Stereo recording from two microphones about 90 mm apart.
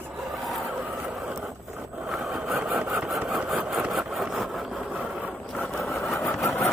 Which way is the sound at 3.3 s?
5° right (ahead or behind).